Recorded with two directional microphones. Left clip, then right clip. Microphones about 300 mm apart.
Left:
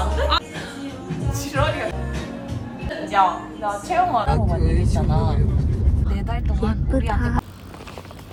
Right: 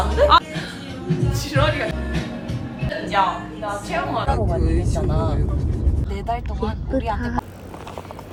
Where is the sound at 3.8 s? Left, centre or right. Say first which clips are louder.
Left 6 dB; left.